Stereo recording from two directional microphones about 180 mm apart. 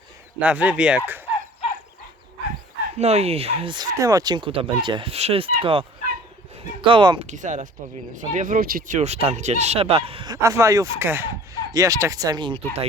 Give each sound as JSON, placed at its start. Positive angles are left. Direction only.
{"t": 0.3, "sound": "speech", "side_deg": -5}
{"t": 3.0, "sound": "speech", "side_deg": -35}
{"t": 6.8, "sound": "speech", "side_deg": -25}
{"t": 7.3, "sound": "speech", "side_deg": -45}
{"t": 9.0, "sound": "speech", "side_deg": -35}
{"t": 10.4, "sound": "speech", "side_deg": -15}